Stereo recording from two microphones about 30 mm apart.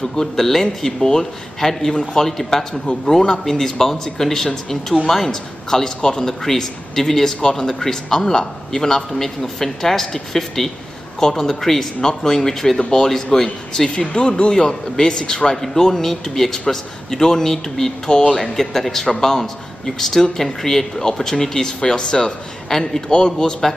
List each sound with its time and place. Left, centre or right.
0.1 s a man's voice: centre
12.0 s a man's voice: left
13.8 s speech: left
14.5 s a man's voice: left
15.5 s a man's voice: centre
23.1 s a man's voice: left